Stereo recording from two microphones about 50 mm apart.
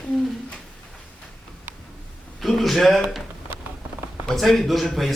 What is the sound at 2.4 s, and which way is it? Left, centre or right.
Speech, centre.